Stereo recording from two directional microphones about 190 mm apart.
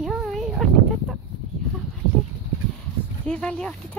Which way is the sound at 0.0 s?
Centre (ahead or behind).